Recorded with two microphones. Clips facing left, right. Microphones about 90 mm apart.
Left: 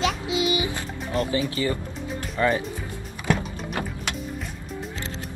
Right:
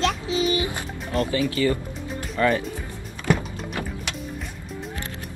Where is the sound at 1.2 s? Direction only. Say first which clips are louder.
Right 3 dB; 25° left (ahead or behind).